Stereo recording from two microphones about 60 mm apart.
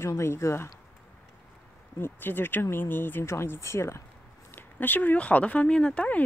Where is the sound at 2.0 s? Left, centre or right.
Left.